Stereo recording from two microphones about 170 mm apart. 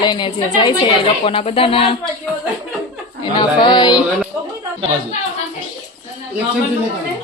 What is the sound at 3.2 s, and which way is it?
Speech, 25° left (ahead or behind).